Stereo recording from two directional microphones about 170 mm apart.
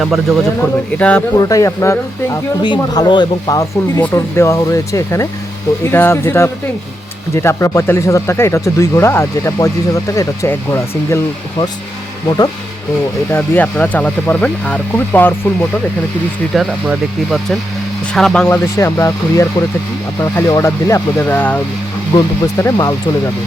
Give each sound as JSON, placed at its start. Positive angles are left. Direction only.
{"t": 0.0, "sound": "speech", "side_deg": 0}
{"t": 1.4, "sound": "speech", "side_deg": 20}
{"t": 13.3, "sound": "speech", "side_deg": 10}
{"t": 16.6, "sound": "speech", "side_deg": 0}